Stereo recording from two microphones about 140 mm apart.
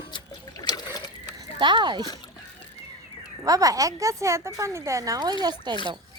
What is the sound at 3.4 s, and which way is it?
Speech, 25° right (ahead or behind).